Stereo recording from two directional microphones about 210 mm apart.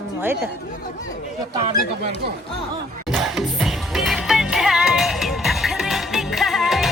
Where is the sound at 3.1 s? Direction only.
Centre (ahead or behind).